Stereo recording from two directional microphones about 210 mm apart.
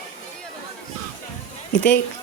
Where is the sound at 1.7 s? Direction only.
60° left (ahead or behind).